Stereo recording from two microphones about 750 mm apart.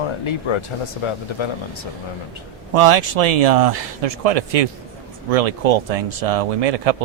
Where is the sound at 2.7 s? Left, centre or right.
Right.